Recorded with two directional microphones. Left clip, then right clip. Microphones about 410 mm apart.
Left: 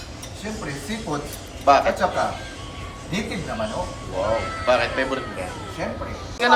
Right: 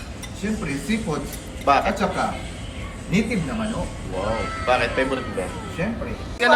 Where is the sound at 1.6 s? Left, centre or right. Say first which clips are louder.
Left 2 dB; centre.